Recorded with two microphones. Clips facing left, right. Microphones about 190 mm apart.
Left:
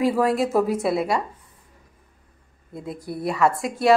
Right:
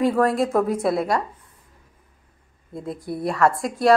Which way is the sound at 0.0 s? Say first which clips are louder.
Right 1 dB; centre (ahead or behind).